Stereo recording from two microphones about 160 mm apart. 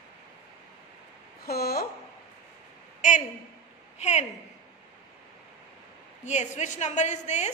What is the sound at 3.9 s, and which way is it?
Speech, 45° left (ahead or behind).